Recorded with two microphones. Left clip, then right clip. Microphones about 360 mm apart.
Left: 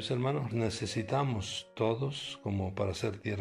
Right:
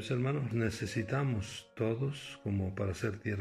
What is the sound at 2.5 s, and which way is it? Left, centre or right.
Speech, left.